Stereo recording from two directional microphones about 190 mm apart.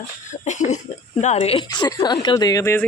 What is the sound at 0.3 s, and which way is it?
Cough, 40° left (ahead or behind).